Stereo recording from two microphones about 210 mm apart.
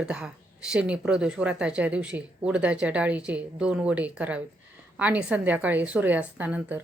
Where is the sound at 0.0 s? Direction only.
5° right (ahead or behind).